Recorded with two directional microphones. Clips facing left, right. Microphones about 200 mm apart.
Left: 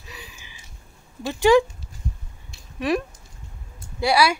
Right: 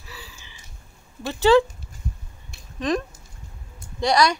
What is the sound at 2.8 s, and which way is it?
Speech, 10° left (ahead or behind).